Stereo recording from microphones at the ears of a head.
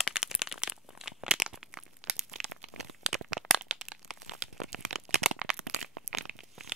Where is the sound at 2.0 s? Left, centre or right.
Right.